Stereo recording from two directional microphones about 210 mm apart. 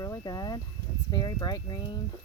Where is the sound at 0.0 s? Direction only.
15° left (ahead or behind).